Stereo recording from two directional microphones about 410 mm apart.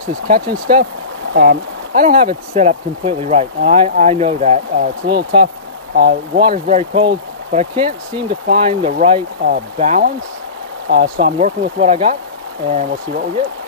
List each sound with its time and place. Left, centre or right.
0.3 s speech: right
5.9 s speech: right